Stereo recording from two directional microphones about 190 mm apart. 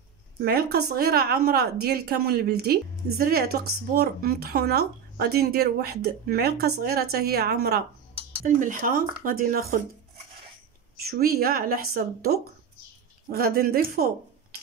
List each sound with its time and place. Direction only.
0.4 s a woman's voice: 55° right (ahead or behind)
8.5 s speech: 45° right (ahead or behind)
11.1 s speech: 55° right (ahead or behind)